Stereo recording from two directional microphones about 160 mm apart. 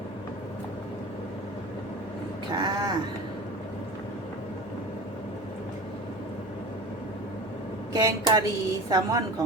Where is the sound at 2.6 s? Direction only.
25° right (ahead or behind).